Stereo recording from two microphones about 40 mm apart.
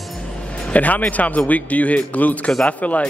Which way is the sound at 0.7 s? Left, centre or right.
Left.